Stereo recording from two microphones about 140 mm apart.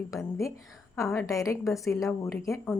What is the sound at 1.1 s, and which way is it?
Speech, 25° left (ahead or behind).